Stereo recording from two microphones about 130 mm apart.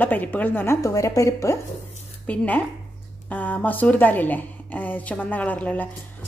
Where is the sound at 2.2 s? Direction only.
10° left (ahead or behind).